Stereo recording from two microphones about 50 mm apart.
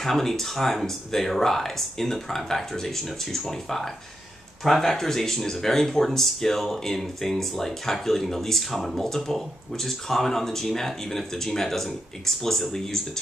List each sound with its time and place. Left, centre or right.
0.0 s speech: centre